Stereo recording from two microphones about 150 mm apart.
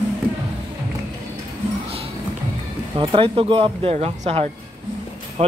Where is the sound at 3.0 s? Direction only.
35° right (ahead or behind).